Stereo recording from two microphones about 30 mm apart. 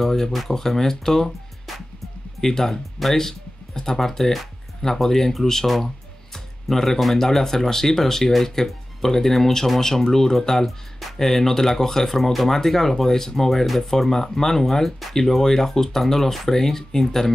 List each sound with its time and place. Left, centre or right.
0.0 s speech: centre
2.4 s speech: centre
4.0 s speech: centre
6.3 s music: centre
7.0 s speech: centre
11.0 s speech: centre
12.4 s speech: centre